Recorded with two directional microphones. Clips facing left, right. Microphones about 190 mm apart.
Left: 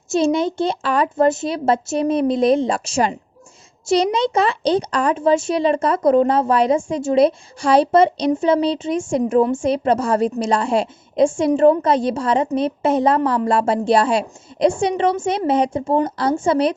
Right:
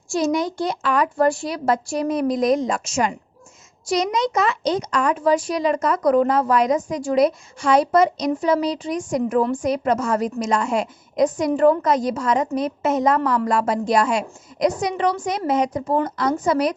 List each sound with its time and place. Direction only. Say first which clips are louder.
0.1 s speech: left 3 dB; 25° left (ahead or behind)